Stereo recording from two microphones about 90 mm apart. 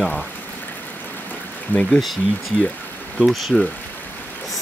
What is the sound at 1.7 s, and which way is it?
Speech, 20° left (ahead or behind).